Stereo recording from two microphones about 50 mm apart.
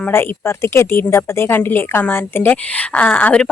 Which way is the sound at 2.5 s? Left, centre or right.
Left.